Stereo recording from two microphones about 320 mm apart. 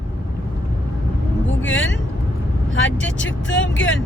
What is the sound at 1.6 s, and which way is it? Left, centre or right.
Speech, left.